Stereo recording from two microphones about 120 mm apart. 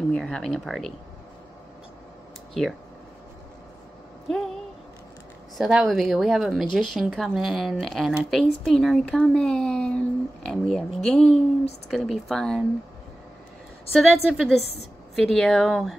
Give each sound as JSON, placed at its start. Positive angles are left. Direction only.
{"t": 0.1, "sound": "speech", "side_deg": 5}
{"t": 5.6, "sound": "speech", "side_deg": -5}
{"t": 13.9, "sound": "speech", "side_deg": -5}
{"t": 14.6, "sound": "a woman's voice", "side_deg": 60}
{"t": 15.1, "sound": "speech", "side_deg": 0}